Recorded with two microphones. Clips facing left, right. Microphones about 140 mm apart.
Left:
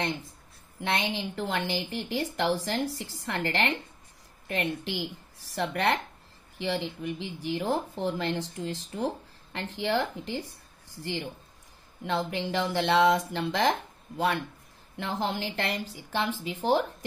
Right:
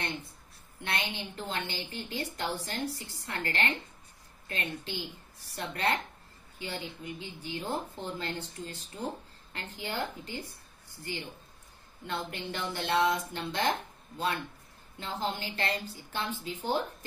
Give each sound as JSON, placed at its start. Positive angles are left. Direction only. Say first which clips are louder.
{"t": 1.1, "sound": "a woman's voice", "louder": "left 6 dB", "side_deg": 90}
{"t": 12.1, "sound": "a woman's voice", "louder": "left 7 dB", "side_deg": 90}